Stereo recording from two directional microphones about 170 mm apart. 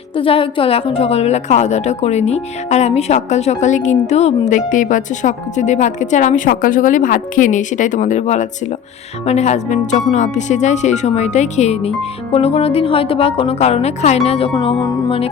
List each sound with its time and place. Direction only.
0.2 s a woman's voice: 30° left (ahead or behind)